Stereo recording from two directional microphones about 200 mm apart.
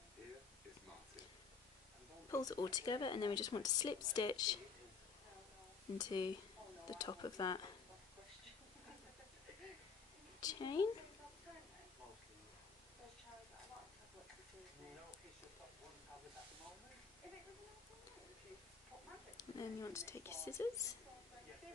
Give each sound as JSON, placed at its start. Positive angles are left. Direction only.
{"t": 2.3, "sound": "speech", "side_deg": 20}
{"t": 5.9, "sound": "speech", "side_deg": 20}
{"t": 10.4, "sound": "speech", "side_deg": 20}
{"t": 19.3, "sound": "speech", "side_deg": 15}